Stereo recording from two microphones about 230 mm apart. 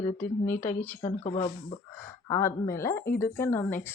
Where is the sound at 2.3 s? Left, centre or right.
Centre.